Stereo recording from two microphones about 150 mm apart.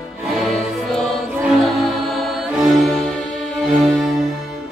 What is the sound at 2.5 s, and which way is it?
Music, centre (ahead or behind).